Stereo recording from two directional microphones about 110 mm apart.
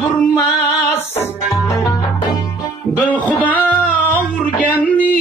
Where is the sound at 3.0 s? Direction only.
15° left (ahead or behind).